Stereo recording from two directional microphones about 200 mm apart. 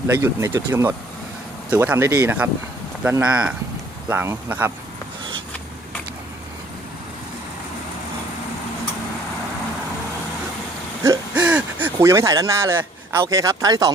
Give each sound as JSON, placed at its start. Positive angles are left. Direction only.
{"t": 0.2, "sound": "speech", "side_deg": -15}
{"t": 11.0, "sound": "a sound", "side_deg": -10}
{"t": 13.2, "sound": "speech", "side_deg": -15}